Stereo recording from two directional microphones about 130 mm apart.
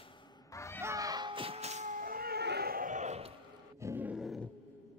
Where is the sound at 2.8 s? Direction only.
70° right (ahead or behind); by 3.3 s 55° right (ahead or behind).